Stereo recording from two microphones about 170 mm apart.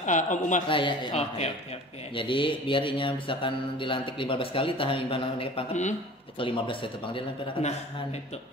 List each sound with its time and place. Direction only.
0.0 s speech: 50° left (ahead or behind)
0.7 s speech: 30° left (ahead or behind)